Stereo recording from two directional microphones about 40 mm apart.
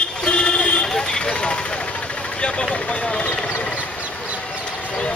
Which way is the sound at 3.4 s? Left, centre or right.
Left.